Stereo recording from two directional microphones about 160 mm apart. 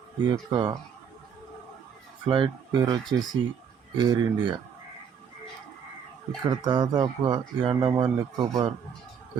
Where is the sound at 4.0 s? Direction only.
30° right (ahead or behind).